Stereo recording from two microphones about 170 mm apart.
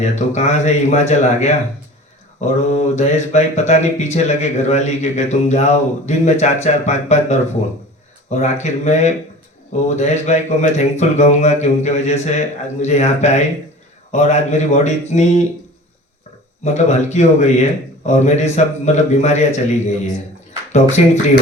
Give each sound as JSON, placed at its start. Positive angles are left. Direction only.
{"t": 0.0, "sound": "mantra", "side_deg": 40}
{"t": 8.3, "sound": "speech", "side_deg": 40}
{"t": 9.7, "sound": "mantra", "side_deg": 40}
{"t": 16.6, "sound": "mantra", "side_deg": 40}
{"t": 20.7, "sound": "mantra", "side_deg": 40}